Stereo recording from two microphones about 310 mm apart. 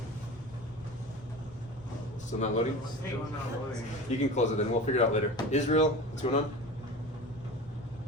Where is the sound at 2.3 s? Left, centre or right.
Left.